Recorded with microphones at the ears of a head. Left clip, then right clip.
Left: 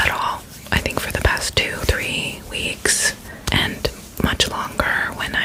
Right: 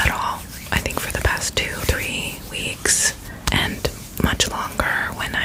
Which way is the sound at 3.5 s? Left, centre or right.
Centre.